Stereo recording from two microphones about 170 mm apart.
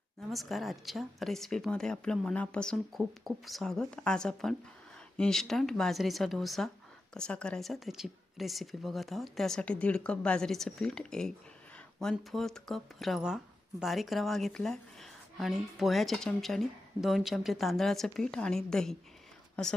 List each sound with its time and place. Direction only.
0.2 s a woman's voice: centre (ahead or behind)